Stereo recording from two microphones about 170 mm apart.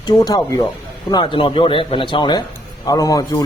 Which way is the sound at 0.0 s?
20° left (ahead or behind).